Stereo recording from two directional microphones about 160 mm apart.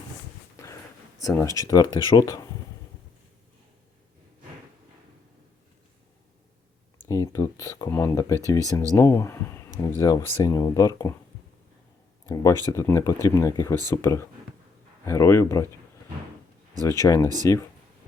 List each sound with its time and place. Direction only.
1.2 s speech: 20° left (ahead or behind)
7.0 s speech: 20° left (ahead or behind)
12.3 s speech: 20° left (ahead or behind)
17.0 s speech: 20° left (ahead or behind)